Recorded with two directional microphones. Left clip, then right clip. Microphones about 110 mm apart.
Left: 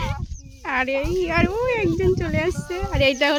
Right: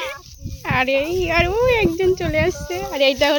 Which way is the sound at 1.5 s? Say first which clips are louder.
Right 5 dB; 20° right (ahead or behind).